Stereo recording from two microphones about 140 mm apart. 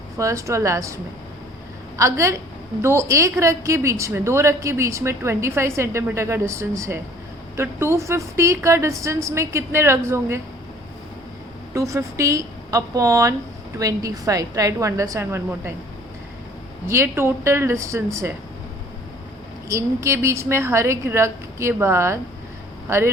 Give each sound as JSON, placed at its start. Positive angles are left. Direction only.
{"t": 0.2, "sound": "a woman's voice", "side_deg": -20}
{"t": 2.0, "sound": "a woman's voice", "side_deg": -20}
{"t": 11.7, "sound": "a woman's voice", "side_deg": -20}
{"t": 16.9, "sound": "a woman's voice", "side_deg": -15}
{"t": 19.6, "sound": "a woman's voice", "side_deg": -20}